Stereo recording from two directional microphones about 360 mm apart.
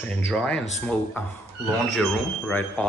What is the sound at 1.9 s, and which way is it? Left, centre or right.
Speech, centre.